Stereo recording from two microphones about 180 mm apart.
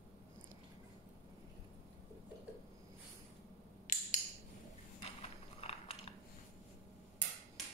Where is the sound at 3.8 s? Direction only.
45° left (ahead or behind).